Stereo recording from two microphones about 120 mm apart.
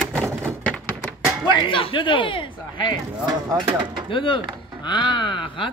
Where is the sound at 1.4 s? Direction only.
45° left (ahead or behind).